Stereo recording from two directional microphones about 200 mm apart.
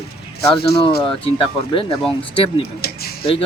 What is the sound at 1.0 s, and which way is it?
Speech, 25° left (ahead or behind).